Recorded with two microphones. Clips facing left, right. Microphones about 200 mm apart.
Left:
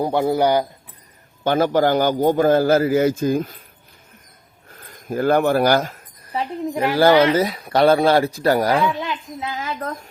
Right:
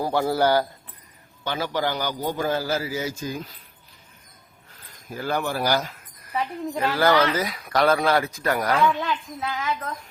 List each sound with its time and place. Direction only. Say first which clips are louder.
0.0 s speech: left 4 dB; 20° left (ahead or behind)
1.5 s a man's voice: left 9 dB; 50° left (ahead or behind)
4.7 s speech: left 11 dB; 50° left (ahead or behind)
6.2 s a sound: left 3 dB; 30° left (ahead or behind)
6.7 s speech: left 6 dB; 25° left (ahead or behind)
8.9 s a child's voice: even; 10° left (ahead or behind)
9.5 s speech: right 1 dB; 30° left (ahead or behind)
9.7 s a man's voice: left 5 dB; 40° left (ahead or behind)